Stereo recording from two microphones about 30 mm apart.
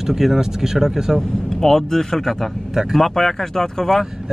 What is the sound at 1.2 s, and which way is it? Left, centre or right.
Speech, centre.